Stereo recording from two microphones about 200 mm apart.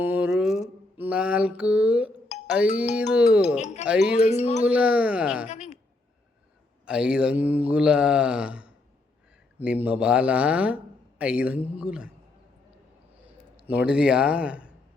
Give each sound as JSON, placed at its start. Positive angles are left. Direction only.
{"t": 0.0, "sound": "mantra", "side_deg": -5}
{"t": 3.6, "sound": "speech", "side_deg": 35}
{"t": 3.8, "sound": "mantra", "side_deg": -5}
{"t": 4.2, "sound": "speech", "side_deg": 35}
{"t": 4.6, "sound": "mantra", "side_deg": -5}
{"t": 5.5, "sound": "a sound", "side_deg": 35}
{"t": 6.8, "sound": "mantra", "side_deg": -5}
{"t": 9.6, "sound": "speech", "side_deg": -10}
{"t": 11.2, "sound": "mantra", "side_deg": -5}
{"t": 13.6, "sound": "mantra", "side_deg": -5}